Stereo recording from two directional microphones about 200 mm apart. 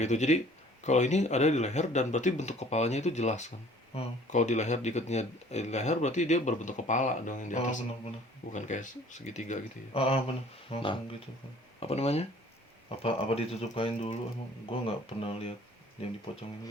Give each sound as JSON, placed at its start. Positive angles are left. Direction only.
{"t": 0.0, "sound": "speech", "side_deg": 35}